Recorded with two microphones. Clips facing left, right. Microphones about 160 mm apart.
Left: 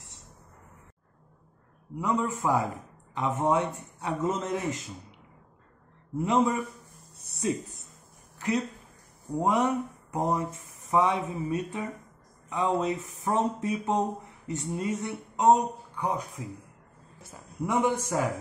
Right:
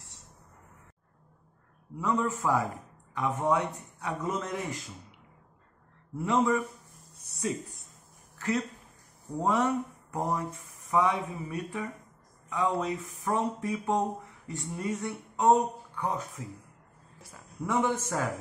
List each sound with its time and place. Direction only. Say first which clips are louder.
2.0 s speech: left 1 dB; 20° left (ahead or behind)
6.1 s speech: left 1 dB; 20° left (ahead or behind)
8.4 s a man's voice: left 2 dB; 15° left (ahead or behind)